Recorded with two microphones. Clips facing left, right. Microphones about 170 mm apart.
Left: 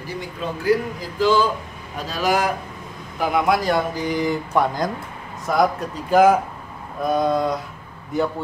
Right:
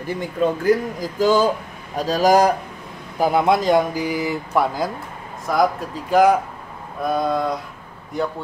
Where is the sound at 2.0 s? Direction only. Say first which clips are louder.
Right 6 dB; 40° right (ahead or behind).